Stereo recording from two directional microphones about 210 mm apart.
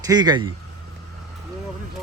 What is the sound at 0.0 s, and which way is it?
Speech, 20° right (ahead or behind).